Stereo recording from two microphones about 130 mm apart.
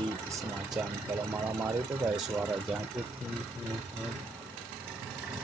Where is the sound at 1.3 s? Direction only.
20° right (ahead or behind).